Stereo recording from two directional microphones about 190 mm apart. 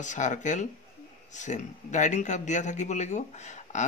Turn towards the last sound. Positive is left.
turn(degrees=40)  # may be behind; listen again after turning